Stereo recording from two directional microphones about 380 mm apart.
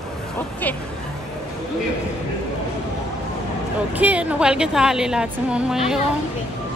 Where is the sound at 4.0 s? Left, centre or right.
Centre.